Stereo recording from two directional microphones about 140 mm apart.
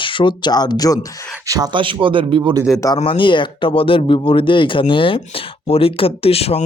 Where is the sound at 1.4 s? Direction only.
25° right (ahead or behind).